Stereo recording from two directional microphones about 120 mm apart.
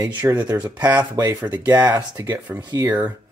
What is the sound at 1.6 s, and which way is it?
Speech, 30° right (ahead or behind).